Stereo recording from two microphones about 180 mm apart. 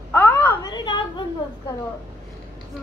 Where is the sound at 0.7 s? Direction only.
25° left (ahead or behind).